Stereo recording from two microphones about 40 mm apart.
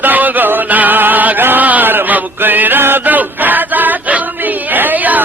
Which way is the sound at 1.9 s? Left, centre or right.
Right.